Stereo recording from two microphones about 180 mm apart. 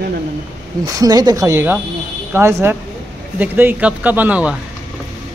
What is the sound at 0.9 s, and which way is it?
Speech, 20° right (ahead or behind).